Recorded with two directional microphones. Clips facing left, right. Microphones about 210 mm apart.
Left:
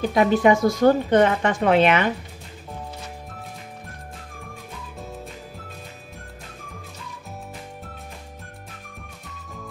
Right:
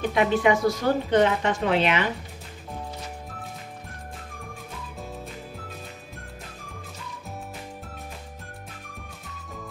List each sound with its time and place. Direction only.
0.1 s speech: 40° left (ahead or behind)
0.8 s a woman's voice: 55° left (ahead or behind)